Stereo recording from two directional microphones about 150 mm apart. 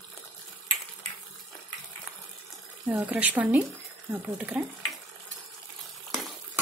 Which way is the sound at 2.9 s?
10° right (ahead or behind).